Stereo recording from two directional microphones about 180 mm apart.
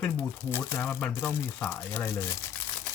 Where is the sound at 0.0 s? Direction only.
10° left (ahead or behind).